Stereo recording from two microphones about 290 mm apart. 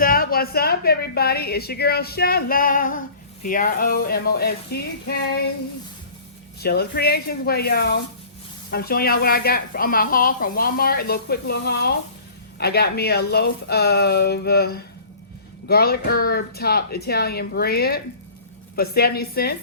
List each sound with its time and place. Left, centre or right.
0.0 s speech: left
6.6 s speech: left